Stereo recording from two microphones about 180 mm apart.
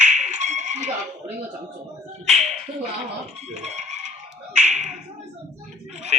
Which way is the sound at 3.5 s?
40° right (ahead or behind).